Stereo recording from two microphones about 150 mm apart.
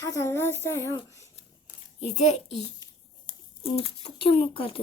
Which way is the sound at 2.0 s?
45° left (ahead or behind).